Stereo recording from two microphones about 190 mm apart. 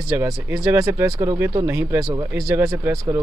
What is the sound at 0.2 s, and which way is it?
Speech, 15° right (ahead or behind).